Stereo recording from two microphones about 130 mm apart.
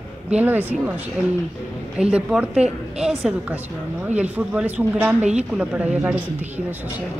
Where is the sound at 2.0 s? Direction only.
10° right (ahead or behind).